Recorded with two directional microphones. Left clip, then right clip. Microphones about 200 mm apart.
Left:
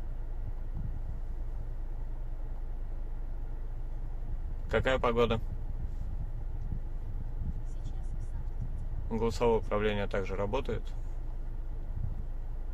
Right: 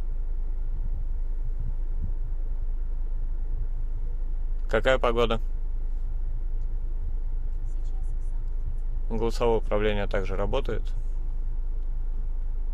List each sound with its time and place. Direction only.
4.6 s speech: 25° right (ahead or behind)
9.1 s speech: 25° right (ahead or behind)